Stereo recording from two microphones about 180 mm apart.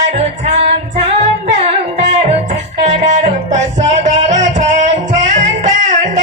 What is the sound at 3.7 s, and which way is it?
Music, 40° right (ahead or behind).